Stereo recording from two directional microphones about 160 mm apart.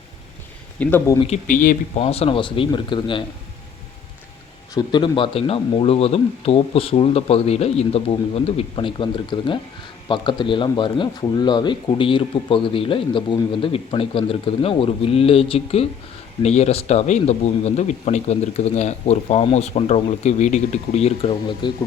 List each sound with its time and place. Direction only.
0.8 s speech: 15° left (ahead or behind)
1.5 s speech: 55° left (ahead or behind)
2.0 s speech: 40° left (ahead or behind)
4.7 s speech: 25° left (ahead or behind)